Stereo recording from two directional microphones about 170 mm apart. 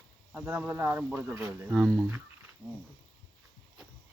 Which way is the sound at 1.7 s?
Centre (ahead or behind).